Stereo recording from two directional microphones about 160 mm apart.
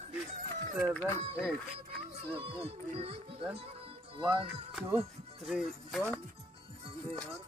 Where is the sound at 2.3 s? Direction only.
40° right (ahead or behind).